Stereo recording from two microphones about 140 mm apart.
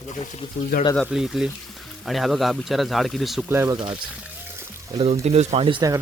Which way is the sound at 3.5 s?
15° right (ahead or behind).